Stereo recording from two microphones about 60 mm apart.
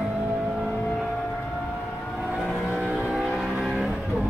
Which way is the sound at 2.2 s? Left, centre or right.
Centre.